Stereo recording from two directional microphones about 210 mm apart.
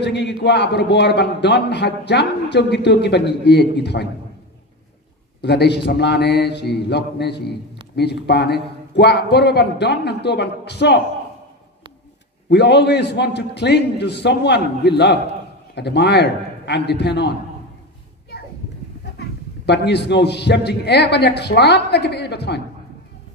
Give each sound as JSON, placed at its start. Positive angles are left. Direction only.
{"t": 0.0, "sound": "a man's voice", "side_deg": 55}
{"t": 5.4, "sound": "a man's voice", "side_deg": 55}
{"t": 12.4, "sound": "a man's voice", "side_deg": 55}
{"t": 19.1, "sound": "a man's voice", "side_deg": 55}